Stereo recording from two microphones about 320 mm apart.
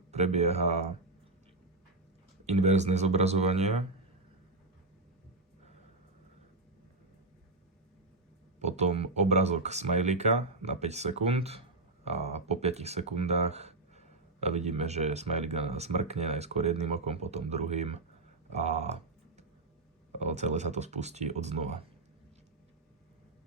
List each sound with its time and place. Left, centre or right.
0.1 s speech: centre
2.5 s speech: right
8.5 s speech: right
20.1 s speech: right